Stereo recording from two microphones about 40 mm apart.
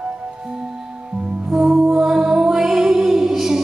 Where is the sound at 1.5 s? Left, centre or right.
Centre.